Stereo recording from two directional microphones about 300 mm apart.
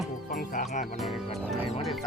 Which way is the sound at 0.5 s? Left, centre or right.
Left.